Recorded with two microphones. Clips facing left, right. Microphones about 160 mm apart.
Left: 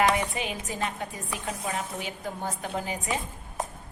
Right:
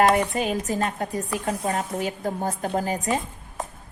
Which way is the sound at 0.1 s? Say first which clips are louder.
Right 6 dB; 45° right (ahead or behind).